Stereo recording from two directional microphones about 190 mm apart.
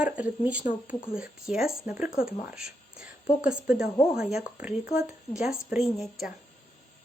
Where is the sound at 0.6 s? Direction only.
45° left (ahead or behind).